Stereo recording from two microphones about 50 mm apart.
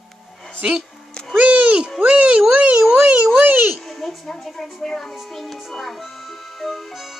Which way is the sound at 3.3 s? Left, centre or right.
Right.